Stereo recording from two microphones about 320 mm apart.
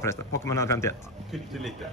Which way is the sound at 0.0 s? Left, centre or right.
Centre.